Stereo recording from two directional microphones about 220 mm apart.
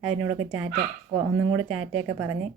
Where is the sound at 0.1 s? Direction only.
90° right.